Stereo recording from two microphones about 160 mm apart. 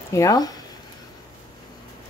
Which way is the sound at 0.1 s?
20° left (ahead or behind).